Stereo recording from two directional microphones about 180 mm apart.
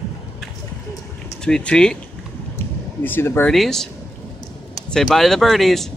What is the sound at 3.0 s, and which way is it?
Speech, 10° left (ahead or behind).